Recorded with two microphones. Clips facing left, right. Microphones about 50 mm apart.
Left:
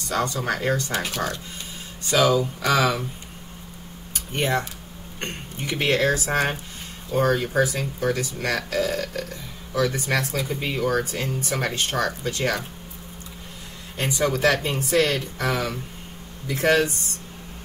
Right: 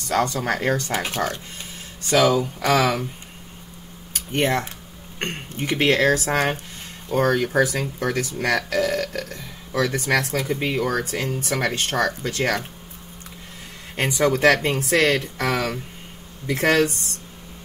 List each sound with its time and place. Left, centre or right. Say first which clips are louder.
0.1 s speech: right 3 dB; right
4.3 s speech: right 2 dB; right
7.5 s speech: right 2 dB; right
13.9 s speech: right 3 dB; right
14.5 s speech: right 3 dB; right